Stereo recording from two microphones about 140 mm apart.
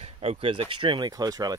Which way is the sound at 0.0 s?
45° right (ahead or behind).